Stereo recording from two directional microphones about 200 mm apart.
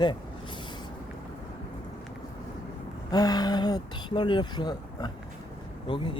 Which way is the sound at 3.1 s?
20° left (ahead or behind).